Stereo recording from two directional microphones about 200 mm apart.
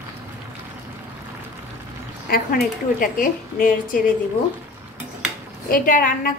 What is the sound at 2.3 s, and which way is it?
A woman's voice, 50° left (ahead or behind).